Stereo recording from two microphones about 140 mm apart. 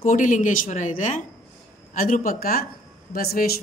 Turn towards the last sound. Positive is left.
turn(degrees=90)